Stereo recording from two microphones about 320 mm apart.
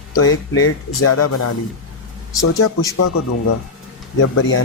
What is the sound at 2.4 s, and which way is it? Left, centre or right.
Speech, left.